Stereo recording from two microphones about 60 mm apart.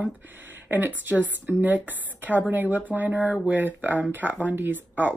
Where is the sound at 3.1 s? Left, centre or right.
Centre.